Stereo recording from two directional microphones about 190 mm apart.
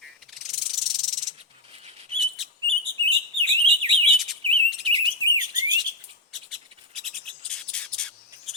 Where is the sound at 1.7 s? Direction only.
30° right (ahead or behind).